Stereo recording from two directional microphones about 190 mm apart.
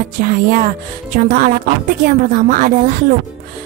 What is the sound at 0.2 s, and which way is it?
Speech, 45° right (ahead or behind).